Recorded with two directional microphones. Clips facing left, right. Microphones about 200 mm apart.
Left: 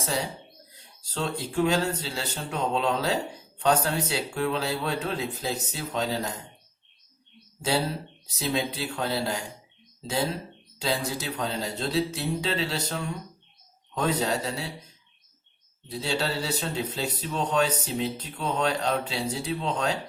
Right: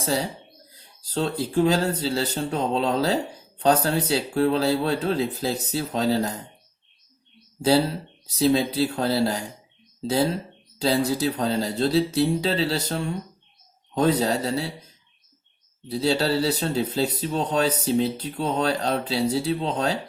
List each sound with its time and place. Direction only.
0.0 s speech: 35° right (ahead or behind)
8.4 s speech: 35° right (ahead or behind)
10.8 s speech: 35° right (ahead or behind)
15.9 s speech: 35° right (ahead or behind)